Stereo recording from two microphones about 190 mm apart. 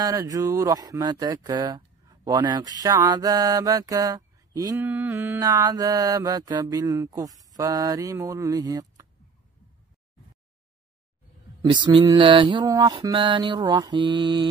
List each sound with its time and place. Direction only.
0.0 s mantra: 20° right (ahead or behind)
2.0 s speech: 20° right (ahead or behind)
2.8 s mantra: 20° right (ahead or behind)
11.6 s a sound: 25° right (ahead or behind)
12.0 s mantra: 25° right (ahead or behind)